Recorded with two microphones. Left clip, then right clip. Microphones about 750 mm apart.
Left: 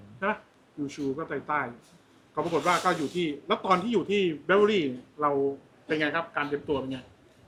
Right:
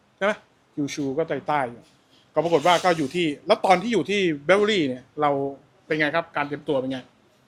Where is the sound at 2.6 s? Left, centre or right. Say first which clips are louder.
Right 6 dB; right.